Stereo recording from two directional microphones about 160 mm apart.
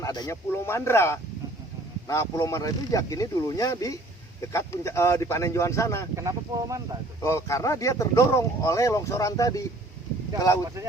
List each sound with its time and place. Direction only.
0.0 s speech: 25° left (ahead or behind)
6.1 s speech: 20° right (ahead or behind)
7.2 s speech: 20° left (ahead or behind)